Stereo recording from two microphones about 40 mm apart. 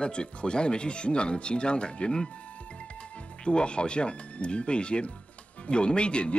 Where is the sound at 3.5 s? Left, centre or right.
Left.